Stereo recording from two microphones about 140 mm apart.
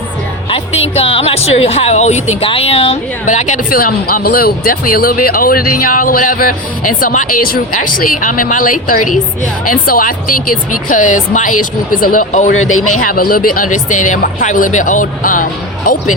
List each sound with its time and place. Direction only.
0.5 s speech: 45° left (ahead or behind)
2.5 s speech: 45° left (ahead or behind)
3.2 s speech: 60° left (ahead or behind)
9.6 s speech: 85° left
10.8 s speech: 65° left (ahead or behind)
13.1 s speech: 90° left; by 15.4 s 70° left (ahead or behind)